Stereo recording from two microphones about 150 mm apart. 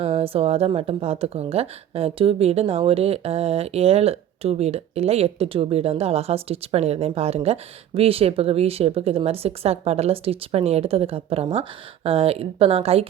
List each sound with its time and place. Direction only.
0.0 s speech: 40° right (ahead or behind)